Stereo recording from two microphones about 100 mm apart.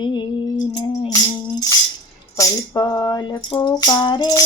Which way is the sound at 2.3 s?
35° left (ahead or behind).